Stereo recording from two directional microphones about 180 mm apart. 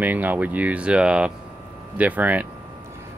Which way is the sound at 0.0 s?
10° right (ahead or behind).